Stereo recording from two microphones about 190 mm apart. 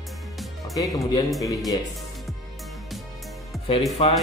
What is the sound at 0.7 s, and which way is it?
Speech, 15° left (ahead or behind).